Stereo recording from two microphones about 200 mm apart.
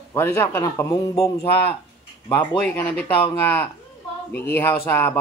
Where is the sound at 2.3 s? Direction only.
10° left (ahead or behind).